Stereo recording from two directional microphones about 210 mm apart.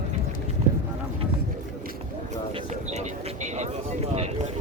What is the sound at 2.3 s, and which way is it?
Vehicle, 35° right (ahead or behind).